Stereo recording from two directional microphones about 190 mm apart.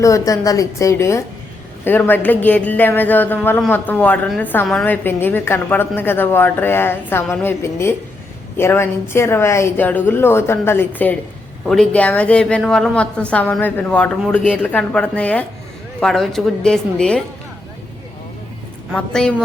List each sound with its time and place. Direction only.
0.0 s a woman's voice: 15° left (ahead or behind)
18.9 s a woman's voice: 5° left (ahead or behind)